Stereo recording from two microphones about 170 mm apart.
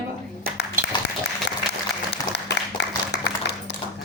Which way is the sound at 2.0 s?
90° left.